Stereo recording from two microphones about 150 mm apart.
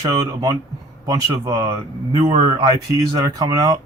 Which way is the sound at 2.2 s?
45° right (ahead or behind).